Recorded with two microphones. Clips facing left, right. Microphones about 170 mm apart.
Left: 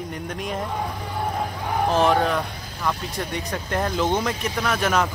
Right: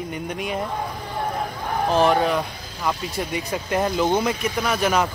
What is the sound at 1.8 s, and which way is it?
Speech, centre (ahead or behind).